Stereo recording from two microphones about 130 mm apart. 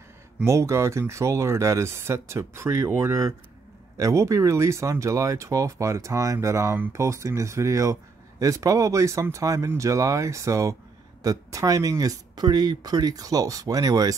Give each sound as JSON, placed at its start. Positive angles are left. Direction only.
{"t": 0.5, "sound": "speech", "side_deg": -20}